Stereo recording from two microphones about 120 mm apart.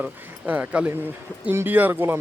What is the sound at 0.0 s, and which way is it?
Speech, 10° right (ahead or behind).